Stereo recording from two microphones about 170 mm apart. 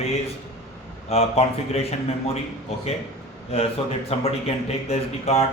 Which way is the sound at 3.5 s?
35° left (ahead or behind).